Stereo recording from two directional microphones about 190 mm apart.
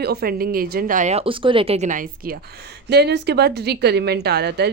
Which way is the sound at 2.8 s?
60° right (ahead or behind).